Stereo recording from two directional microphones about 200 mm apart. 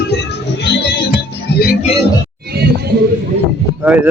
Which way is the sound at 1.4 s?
50° left (ahead or behind).